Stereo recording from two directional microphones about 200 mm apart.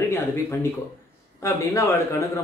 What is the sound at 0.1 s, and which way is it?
Speech, 15° left (ahead or behind).